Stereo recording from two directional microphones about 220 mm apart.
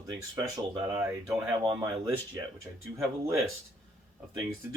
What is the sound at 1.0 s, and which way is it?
Speech, 5° right (ahead or behind).